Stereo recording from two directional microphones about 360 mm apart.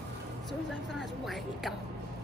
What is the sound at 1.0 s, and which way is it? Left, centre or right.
Speech, centre.